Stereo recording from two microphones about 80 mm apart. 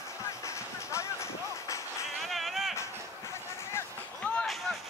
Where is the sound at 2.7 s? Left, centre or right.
Left.